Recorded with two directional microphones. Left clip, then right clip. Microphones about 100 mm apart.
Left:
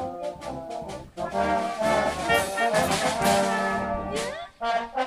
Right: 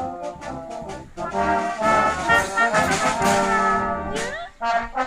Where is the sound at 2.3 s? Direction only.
45° left (ahead or behind).